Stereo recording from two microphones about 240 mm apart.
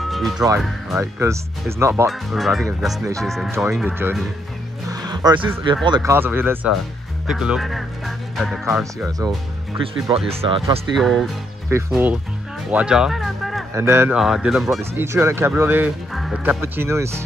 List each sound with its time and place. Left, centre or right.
0.0 s music: centre
0.6 s speech: centre
1.2 s speech: centre
2.0 s speech: centre
3.5 s speech: centre
4.8 s music: centre
5.9 s speech: centre
10.1 s speech: right
11.0 s speech: centre
13.7 s speech: centre